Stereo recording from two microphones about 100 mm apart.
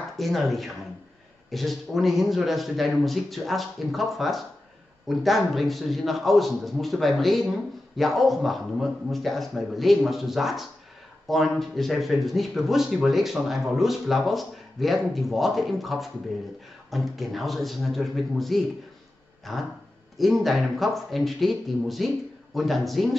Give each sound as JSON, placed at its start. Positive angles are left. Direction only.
{"t": 0.2, "sound": "speech", "side_deg": 0}